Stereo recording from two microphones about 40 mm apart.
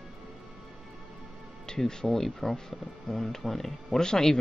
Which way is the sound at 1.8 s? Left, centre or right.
Centre.